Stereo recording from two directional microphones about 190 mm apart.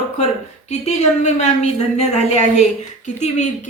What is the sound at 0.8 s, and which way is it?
A woman's voice, 35° left (ahead or behind).